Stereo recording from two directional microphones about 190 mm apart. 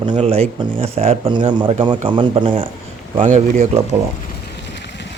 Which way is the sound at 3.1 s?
40° right (ahead or behind).